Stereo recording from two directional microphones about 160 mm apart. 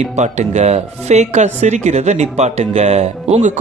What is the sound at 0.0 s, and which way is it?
Speech, 45° right (ahead or behind).